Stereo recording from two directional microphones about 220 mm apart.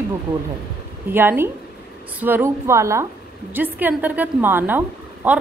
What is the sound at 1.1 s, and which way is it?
A woman's voice, 10° right (ahead or behind).